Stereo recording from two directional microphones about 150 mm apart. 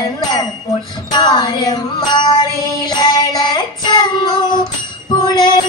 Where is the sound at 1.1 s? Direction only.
30° left (ahead or behind).